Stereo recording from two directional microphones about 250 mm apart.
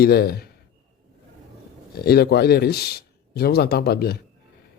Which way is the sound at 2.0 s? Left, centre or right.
Left.